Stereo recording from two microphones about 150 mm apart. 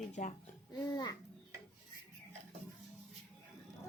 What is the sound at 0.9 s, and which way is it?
Speech, 25° left (ahead or behind).